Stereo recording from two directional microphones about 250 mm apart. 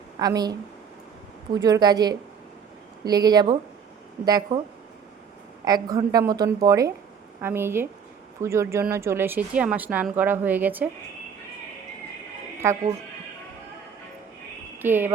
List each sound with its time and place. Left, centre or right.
0.2 s speech: centre
1.6 s speech: centre
5.6 s speech: centre
12.6 s speech: centre
14.8 s speech: centre